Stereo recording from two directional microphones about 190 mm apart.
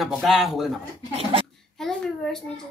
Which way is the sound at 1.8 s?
Centre (ahead or behind).